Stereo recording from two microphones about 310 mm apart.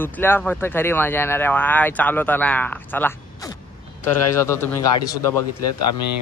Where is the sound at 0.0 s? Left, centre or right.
Centre.